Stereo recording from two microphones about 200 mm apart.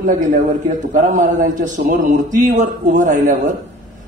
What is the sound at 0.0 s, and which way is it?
A man's voice, 40° right (ahead or behind).